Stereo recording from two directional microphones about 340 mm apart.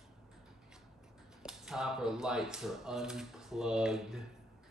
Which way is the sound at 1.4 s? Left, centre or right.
Centre.